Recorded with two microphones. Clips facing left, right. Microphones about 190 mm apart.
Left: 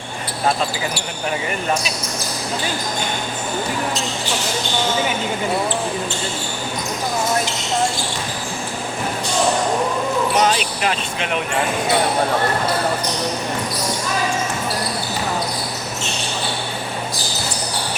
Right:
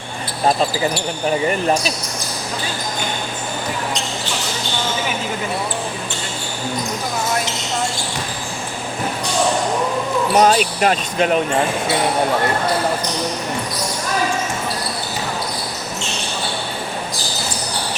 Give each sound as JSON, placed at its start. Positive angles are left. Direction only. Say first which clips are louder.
{"t": 10.3, "sound": "speech", "louder": "right 4 dB", "side_deg": -45}